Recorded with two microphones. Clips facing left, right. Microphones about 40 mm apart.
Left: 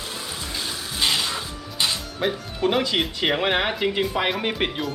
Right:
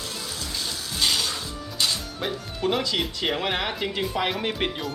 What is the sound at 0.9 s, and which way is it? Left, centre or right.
Music, centre.